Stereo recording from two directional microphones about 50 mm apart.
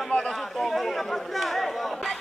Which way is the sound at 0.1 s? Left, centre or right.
Centre.